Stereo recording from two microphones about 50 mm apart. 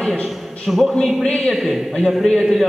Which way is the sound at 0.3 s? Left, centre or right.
Centre.